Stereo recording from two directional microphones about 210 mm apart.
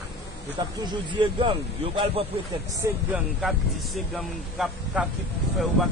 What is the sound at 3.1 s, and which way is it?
Speech, centre (ahead or behind).